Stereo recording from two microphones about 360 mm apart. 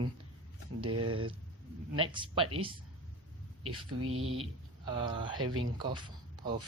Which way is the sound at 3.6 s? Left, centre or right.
Right.